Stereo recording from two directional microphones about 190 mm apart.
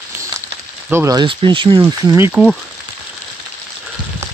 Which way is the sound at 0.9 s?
15° right (ahead or behind).